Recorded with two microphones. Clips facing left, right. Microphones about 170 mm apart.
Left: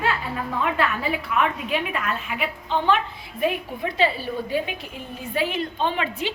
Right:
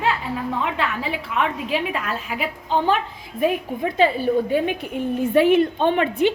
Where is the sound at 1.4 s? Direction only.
30° right (ahead or behind).